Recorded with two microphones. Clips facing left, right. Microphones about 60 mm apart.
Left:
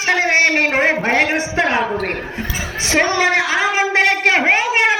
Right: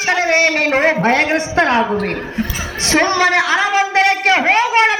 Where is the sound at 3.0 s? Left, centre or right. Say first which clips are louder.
Right 1 dB; centre.